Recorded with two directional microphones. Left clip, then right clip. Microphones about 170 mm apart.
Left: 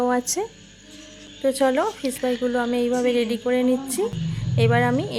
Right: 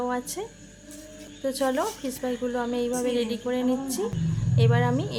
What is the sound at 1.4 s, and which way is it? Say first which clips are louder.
A woman's voice: left 6 dB; 20° left (ahead or behind).